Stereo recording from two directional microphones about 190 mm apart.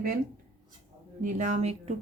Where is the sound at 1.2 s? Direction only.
40° right (ahead or behind).